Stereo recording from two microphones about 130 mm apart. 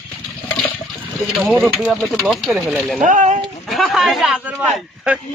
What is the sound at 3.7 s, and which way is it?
A man's voice, centre (ahead or behind).